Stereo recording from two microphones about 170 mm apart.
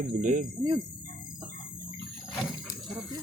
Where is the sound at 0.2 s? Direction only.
50° right (ahead or behind).